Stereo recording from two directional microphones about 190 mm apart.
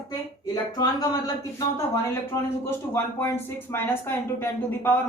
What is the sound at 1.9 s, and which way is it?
A man's voice, 15° left (ahead or behind).